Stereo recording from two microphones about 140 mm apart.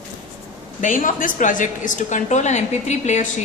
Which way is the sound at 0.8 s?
70° left (ahead or behind).